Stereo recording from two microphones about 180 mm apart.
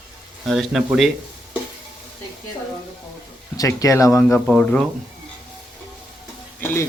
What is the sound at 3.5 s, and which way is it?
Speech, 20° left (ahead or behind).